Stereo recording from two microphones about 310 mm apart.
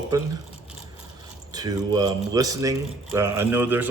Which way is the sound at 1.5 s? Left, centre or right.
Centre.